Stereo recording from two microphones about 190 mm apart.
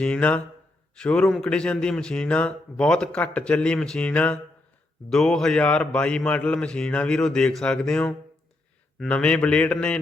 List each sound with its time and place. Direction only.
0.0 s a man's voice: 5° left (ahead or behind)